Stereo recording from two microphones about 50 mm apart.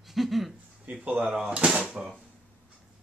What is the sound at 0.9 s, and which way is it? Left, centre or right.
Speech, right.